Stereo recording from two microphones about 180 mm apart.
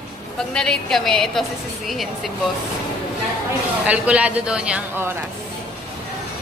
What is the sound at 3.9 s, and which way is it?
A man's voice, 5° right (ahead or behind).